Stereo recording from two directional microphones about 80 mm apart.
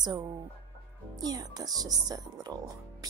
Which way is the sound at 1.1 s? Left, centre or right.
Right.